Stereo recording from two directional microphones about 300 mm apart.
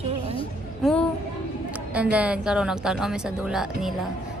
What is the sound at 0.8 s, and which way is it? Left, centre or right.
Child singing, centre.